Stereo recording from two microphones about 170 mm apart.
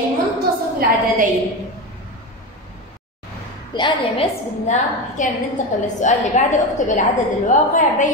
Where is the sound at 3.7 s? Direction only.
30° left (ahead or behind).